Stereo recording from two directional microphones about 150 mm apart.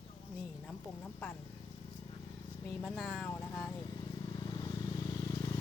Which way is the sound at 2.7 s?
5° left (ahead or behind).